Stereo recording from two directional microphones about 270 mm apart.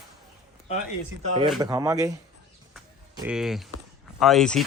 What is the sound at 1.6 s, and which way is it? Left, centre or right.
Speech, centre.